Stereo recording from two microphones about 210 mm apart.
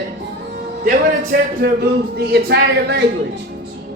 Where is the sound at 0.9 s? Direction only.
40° right (ahead or behind).